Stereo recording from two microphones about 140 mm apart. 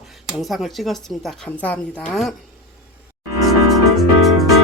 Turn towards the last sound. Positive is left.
turn(degrees=0)  # may be behind; listen again after turning